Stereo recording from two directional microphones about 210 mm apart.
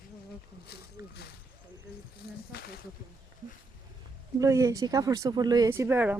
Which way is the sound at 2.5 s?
50° left (ahead or behind).